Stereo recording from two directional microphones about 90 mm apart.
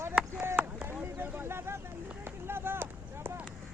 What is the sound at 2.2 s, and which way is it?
Run, 25° right (ahead or behind).